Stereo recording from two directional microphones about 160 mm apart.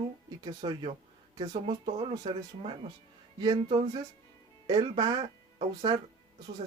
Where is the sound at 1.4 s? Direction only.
45° right (ahead or behind).